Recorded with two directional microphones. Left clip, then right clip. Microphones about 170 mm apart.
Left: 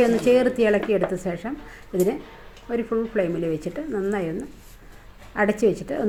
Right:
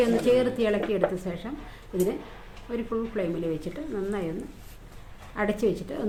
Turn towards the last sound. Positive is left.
turn(degrees=40)  # may be behind; listen again after turning